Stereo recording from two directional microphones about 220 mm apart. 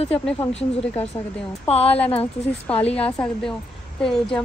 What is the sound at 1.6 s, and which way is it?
Speech, 30° left (ahead or behind).